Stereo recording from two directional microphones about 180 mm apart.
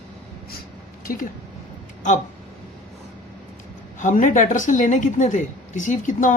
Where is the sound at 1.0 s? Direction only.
55° left (ahead or behind).